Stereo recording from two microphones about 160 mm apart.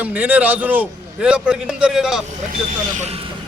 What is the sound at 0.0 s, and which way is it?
A man's voice, 10° right (ahead or behind).